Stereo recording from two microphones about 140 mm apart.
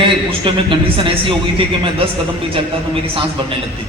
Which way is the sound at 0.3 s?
40° right (ahead or behind).